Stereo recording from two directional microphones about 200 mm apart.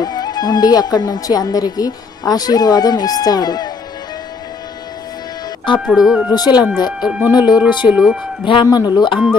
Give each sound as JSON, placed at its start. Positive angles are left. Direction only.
{"t": 0.0, "sound": "speech", "side_deg": 20}
{"t": 5.9, "sound": "speech", "side_deg": 0}
{"t": 6.3, "sound": "speech", "side_deg": 20}
{"t": 6.9, "sound": "speech", "side_deg": -5}
{"t": 7.3, "sound": "speech", "side_deg": 20}
{"t": 7.9, "sound": "speech", "side_deg": -5}
{"t": 8.5, "sound": "speech", "side_deg": 25}